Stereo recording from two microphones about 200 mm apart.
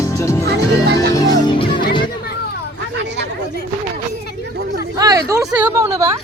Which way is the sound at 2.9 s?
60° right (ahead or behind).